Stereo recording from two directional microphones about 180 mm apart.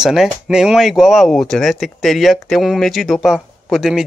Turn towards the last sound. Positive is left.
turn(degrees=0)  # may be behind; listen again after turning